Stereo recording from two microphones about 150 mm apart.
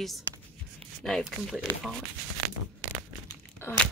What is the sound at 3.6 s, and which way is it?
Crunch, 15° left (ahead or behind).